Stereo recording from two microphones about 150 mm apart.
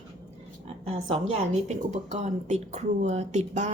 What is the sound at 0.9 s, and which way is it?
A woman's voice, 40° right (ahead or behind).